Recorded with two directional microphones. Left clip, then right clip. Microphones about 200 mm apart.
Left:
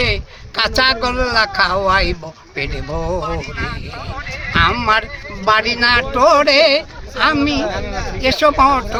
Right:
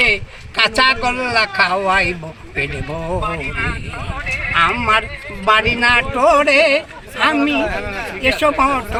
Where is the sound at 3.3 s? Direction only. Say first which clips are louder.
Right 2 dB; 35° right (ahead or behind).